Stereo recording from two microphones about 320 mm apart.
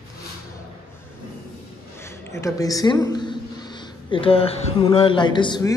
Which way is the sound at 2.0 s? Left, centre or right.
Centre.